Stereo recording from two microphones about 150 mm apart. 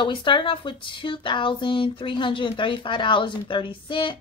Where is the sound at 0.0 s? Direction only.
30° left (ahead or behind).